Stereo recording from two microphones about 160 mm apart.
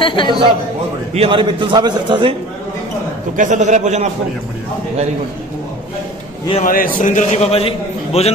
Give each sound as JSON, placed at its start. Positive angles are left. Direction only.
{"t": 0.0, "sound": "speech", "side_deg": 30}
{"t": 1.1, "sound": "a man's voice", "side_deg": -35}
{"t": 3.3, "sound": "a man's voice", "side_deg": -50}
{"t": 6.6, "sound": "a man's voice", "side_deg": 60}